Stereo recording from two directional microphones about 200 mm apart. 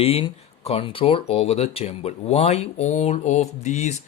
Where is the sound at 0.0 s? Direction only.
30° left (ahead or behind).